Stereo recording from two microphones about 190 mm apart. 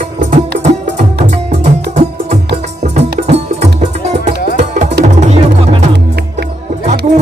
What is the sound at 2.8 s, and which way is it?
Music, 35° right (ahead or behind).